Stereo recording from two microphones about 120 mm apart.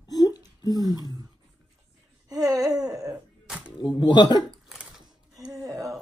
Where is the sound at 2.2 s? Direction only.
30° right (ahead or behind).